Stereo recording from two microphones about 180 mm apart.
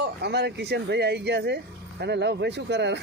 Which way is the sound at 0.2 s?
70° right (ahead or behind).